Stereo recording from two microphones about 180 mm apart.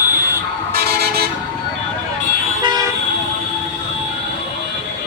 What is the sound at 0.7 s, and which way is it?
Vehicle, 60° right (ahead or behind).